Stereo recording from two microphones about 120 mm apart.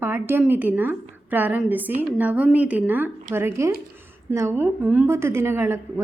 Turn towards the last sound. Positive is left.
turn(degrees=-20)  # may be behind; listen again after turning